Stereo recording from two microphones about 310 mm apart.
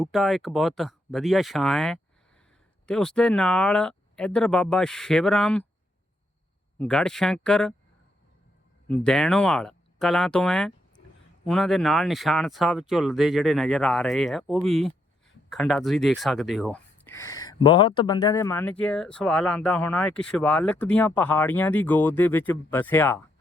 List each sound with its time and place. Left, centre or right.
0.0 s speech: centre
6.7 s speech: centre
8.9 s speech: centre